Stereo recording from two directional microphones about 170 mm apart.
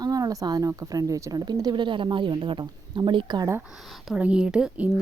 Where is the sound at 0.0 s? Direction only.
20° right (ahead or behind).